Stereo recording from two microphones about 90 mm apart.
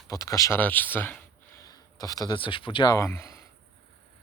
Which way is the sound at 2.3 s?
70° left (ahead or behind).